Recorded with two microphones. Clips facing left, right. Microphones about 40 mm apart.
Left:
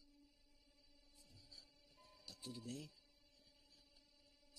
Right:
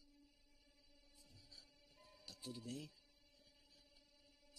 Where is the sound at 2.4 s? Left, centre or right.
Centre.